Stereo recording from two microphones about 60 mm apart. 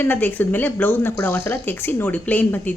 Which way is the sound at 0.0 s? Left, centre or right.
Left.